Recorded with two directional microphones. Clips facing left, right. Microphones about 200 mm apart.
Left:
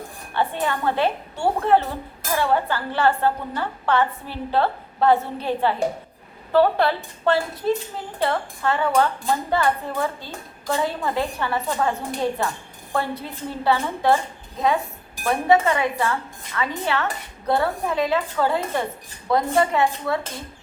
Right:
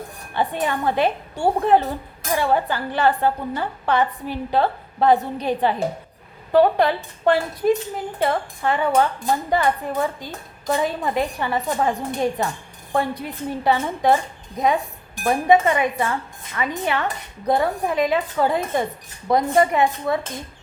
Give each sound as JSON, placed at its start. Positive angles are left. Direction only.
{"t": 0.3, "sound": "a woman's voice", "side_deg": -15}
{"t": 15.4, "sound": "dishes", "side_deg": -20}
{"t": 16.6, "sound": "a woman's voice", "side_deg": -15}